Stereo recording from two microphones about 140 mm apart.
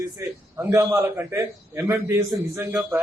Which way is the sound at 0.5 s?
20° right (ahead or behind).